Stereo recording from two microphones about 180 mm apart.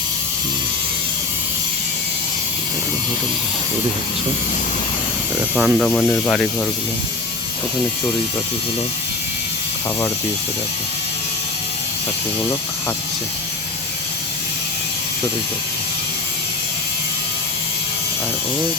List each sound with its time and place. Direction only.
5.5 s speech: 5° right (ahead or behind)
5.9 s speech: 10° left (ahead or behind)